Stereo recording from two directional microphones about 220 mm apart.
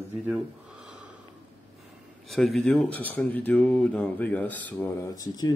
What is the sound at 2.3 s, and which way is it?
Speech, centre (ahead or behind).